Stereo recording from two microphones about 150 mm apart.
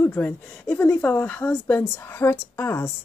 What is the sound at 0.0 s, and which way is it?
Speech, 10° left (ahead or behind).